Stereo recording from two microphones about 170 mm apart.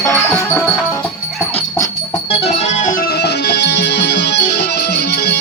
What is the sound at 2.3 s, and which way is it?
Music, 35° left (ahead or behind).